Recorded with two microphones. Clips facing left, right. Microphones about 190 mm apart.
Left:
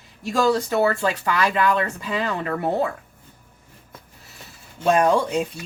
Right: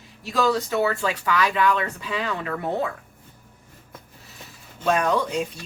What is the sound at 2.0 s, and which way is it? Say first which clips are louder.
Speech: left 3 dB; 45° left (ahead or behind).